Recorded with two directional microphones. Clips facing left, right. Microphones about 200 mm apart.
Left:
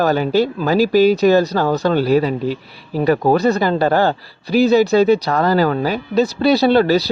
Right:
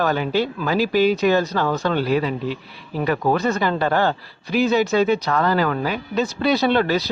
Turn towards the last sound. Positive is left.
turn(degrees=35)  # may be behind; listen again after turning